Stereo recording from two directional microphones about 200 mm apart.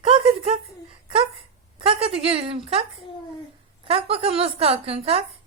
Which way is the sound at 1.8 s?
25° right (ahead or behind).